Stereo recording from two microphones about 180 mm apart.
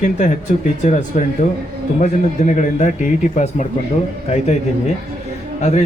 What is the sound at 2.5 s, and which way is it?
Speech, 45° left (ahead or behind).